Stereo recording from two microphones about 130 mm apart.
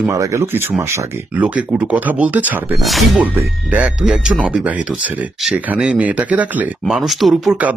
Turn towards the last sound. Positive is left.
turn(degrees=-10)  # may be behind; listen again after turning